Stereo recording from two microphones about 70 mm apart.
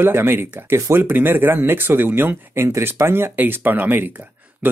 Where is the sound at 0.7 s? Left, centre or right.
Right.